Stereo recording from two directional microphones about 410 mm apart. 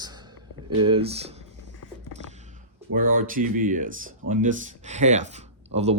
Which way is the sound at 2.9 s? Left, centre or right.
Centre.